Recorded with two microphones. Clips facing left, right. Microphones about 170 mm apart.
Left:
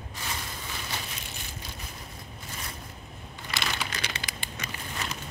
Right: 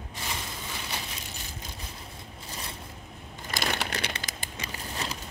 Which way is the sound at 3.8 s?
60° right (ahead or behind).